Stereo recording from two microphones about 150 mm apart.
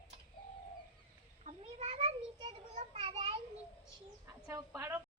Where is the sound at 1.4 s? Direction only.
45° right (ahead or behind).